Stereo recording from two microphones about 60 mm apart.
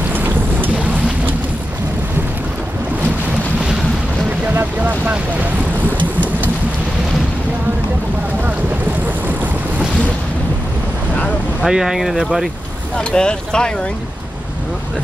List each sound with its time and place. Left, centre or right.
0.1 s boat: right
4.7 s boat: right
11.6 s speech: centre
12.9 s speech: centre